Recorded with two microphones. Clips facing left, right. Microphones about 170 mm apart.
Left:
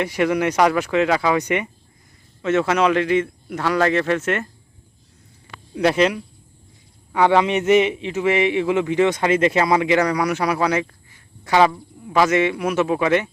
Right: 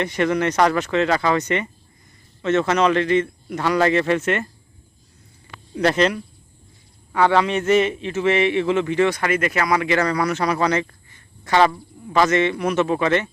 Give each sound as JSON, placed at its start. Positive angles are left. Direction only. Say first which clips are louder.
{"t": 0.0, "sound": "a man's voice", "louder": "left 1 dB", "side_deg": 10}
{"t": 5.7, "sound": "a man's voice", "louder": "left 1 dB", "side_deg": 10}